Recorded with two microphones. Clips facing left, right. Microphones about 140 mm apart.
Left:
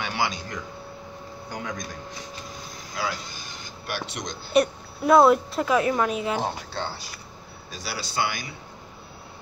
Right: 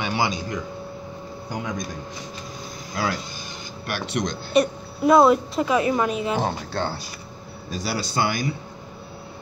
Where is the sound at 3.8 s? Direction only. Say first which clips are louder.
Right 6 dB; 65° right (ahead or behind).